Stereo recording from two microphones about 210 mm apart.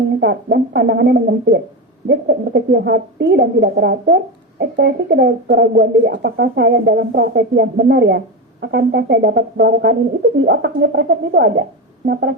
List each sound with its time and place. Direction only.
0.2 s speech: 55° right (ahead or behind)